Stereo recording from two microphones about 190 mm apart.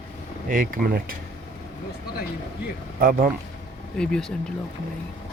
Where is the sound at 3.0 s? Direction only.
50° right (ahead or behind).